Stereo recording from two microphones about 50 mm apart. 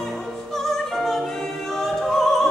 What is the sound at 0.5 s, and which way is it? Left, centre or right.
Opera, centre.